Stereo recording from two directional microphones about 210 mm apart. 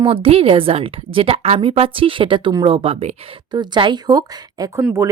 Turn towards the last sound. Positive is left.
turn(degrees=-10)  # may be behind; listen again after turning